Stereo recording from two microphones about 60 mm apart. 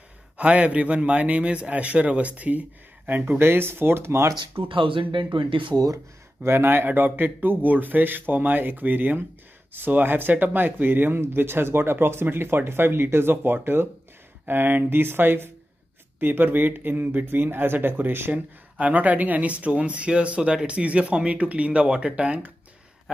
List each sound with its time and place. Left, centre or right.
0.4 s speech: right
3.1 s speech: right
6.4 s speech: right
18.3 s speech: right